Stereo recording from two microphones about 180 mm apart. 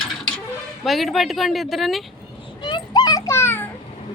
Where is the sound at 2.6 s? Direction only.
25° left (ahead or behind).